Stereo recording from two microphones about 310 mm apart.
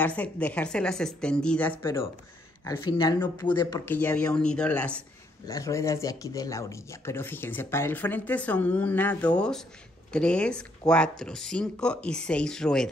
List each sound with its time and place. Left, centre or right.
0.0 s speech: centre